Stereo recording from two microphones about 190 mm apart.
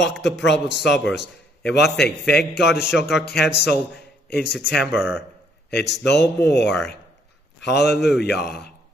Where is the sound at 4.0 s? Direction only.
60° left (ahead or behind).